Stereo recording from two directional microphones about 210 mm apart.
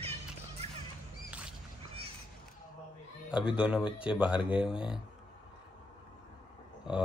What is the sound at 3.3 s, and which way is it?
Speech, 5° right (ahead or behind).